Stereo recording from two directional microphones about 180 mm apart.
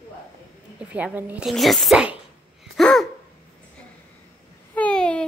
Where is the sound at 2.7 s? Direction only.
Centre (ahead or behind).